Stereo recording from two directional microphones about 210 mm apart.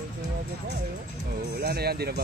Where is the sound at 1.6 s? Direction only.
50° right (ahead or behind).